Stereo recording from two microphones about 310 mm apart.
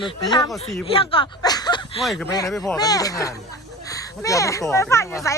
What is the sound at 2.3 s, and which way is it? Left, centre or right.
A child's voice, centre.